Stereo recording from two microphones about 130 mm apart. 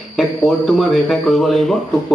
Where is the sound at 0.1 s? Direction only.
Centre (ahead or behind).